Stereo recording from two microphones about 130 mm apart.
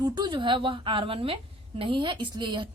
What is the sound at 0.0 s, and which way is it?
A woman's voice, 35° right (ahead or behind).